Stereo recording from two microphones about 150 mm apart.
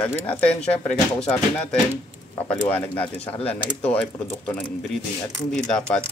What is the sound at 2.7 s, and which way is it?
Speech, 10° left (ahead or behind).